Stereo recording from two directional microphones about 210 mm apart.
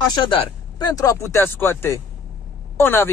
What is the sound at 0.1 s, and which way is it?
Speech, 25° left (ahead or behind).